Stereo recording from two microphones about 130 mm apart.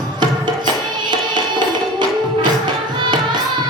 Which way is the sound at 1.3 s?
35° right (ahead or behind).